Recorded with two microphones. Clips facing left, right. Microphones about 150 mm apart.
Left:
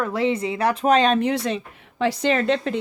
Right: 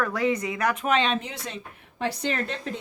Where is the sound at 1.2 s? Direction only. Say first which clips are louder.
Left 13 dB; 70° left (ahead or behind); by 2.8 s 90° left.